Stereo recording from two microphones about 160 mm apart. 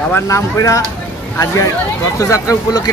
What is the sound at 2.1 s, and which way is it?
Speech, 20° left (ahead or behind).